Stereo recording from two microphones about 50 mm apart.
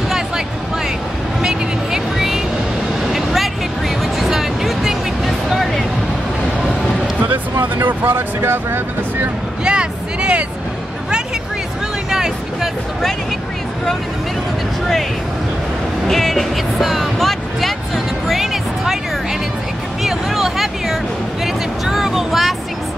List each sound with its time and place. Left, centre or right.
1.4 s vehicle: centre
4.0 s music: centre
7.2 s speech: right
9.7 s a sound: centre
16.1 s music: centre
20.0 s speech: centre